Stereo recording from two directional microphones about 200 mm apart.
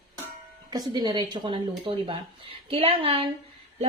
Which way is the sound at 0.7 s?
20° right (ahead or behind).